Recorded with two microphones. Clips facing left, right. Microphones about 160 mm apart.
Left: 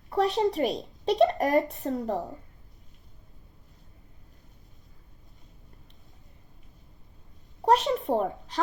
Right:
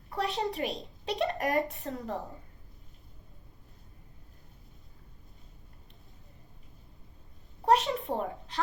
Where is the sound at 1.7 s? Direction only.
40° left (ahead or behind).